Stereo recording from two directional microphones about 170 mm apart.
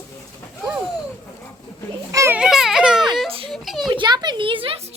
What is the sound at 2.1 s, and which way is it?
Children playing, 15° right (ahead or behind).